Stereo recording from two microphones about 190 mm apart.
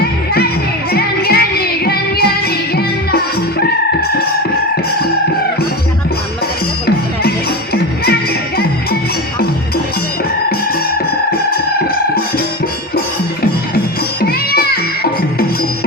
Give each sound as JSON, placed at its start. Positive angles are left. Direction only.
{"t": 0.9, "sound": "music", "side_deg": 55}
{"t": 6.8, "sound": "music", "side_deg": 55}
{"t": 13.4, "sound": "music", "side_deg": 55}